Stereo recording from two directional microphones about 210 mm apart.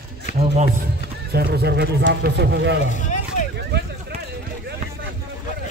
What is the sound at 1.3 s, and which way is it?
Speech, 50° right (ahead or behind).